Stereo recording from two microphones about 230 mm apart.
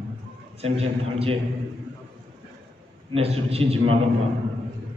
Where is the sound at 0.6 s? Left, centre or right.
Right.